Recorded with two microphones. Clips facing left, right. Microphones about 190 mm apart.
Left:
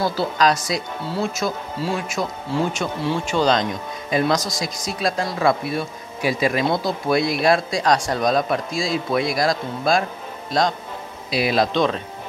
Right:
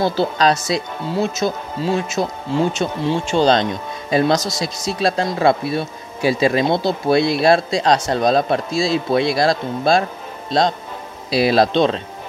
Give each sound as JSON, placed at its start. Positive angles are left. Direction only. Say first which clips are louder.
{"t": 0.0, "sound": "speech", "louder": "right 3 dB", "side_deg": -25}